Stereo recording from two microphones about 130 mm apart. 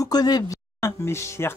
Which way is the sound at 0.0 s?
30° left (ahead or behind).